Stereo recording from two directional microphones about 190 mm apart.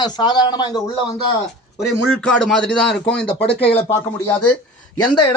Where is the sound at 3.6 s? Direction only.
30° left (ahead or behind).